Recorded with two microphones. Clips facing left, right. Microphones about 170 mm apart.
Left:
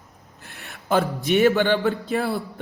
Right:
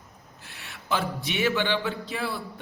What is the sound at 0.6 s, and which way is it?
A man's voice, 45° left (ahead or behind).